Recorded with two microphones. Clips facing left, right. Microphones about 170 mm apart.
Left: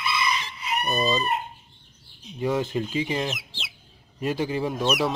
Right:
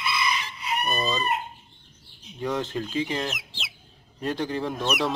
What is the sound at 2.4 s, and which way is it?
Speech, 10° left (ahead or behind).